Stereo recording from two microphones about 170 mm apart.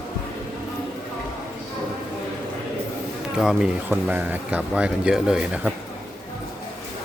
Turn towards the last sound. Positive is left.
turn(degrees=-5)  # may be behind; listen again after turning